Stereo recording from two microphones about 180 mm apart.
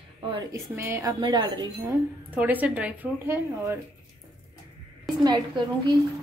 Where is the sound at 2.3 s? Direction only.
10° right (ahead or behind).